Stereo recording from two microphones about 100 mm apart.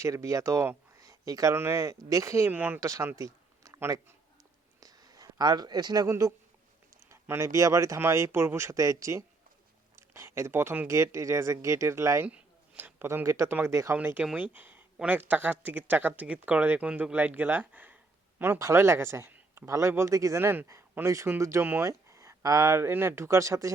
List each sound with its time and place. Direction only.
0.0 s speech: 30° right (ahead or behind)
0.9 s a sound: 35° right (ahead or behind)
1.5 s speech: 25° right (ahead or behind)
2.5 s speech: 20° right (ahead or behind)
2.8 s speech: 30° right (ahead or behind)
3.2 s a sound: 35° right (ahead or behind)
4.8 s a sound: 40° right (ahead or behind)
7.1 s speech: 30° right (ahead or behind)
12.3 s speech: 20° right (ahead or behind)